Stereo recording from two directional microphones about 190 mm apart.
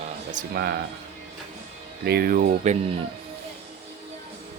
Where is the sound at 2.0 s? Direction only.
55° right (ahead or behind).